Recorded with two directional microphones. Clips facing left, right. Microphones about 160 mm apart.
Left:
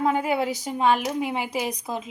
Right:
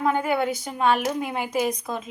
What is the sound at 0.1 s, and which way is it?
Speech, 10° left (ahead or behind).